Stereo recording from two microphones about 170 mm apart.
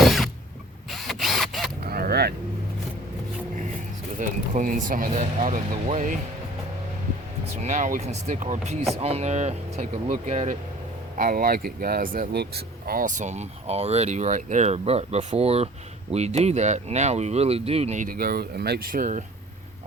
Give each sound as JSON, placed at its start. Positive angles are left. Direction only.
{"t": 0.0, "sound": "mechanisms", "side_deg": 0}
{"t": 0.9, "sound": "camera", "side_deg": 0}
{"t": 1.8, "sound": "honk", "side_deg": -65}
{"t": 4.2, "sound": "speech", "side_deg": -50}
{"t": 7.6, "sound": "speech", "side_deg": -45}